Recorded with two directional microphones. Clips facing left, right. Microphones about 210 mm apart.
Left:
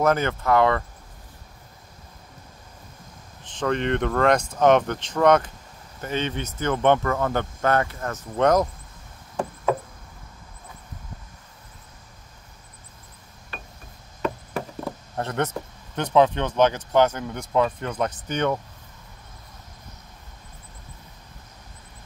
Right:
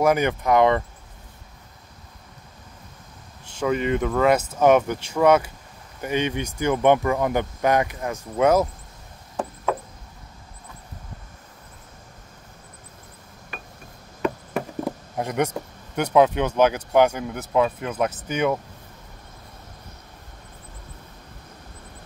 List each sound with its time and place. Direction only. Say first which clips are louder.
0.0 s speech: right 2 dB; 15° right (ahead or behind)
3.4 s speech: right 1 dB; 10° right (ahead or behind)
15.1 s speech: right 2 dB; 10° right (ahead or behind)